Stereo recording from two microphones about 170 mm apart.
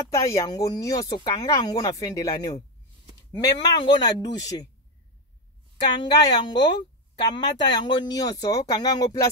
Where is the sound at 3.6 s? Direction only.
25° left (ahead or behind).